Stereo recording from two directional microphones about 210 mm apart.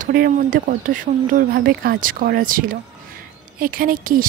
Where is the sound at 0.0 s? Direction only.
40° right (ahead or behind).